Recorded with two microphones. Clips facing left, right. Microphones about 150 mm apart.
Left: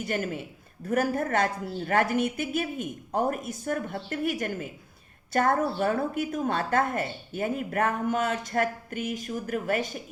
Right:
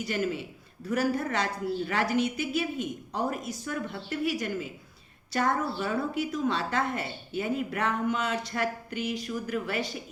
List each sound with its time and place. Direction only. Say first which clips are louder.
0.0 s a woman's voice: even; 50° left (ahead or behind)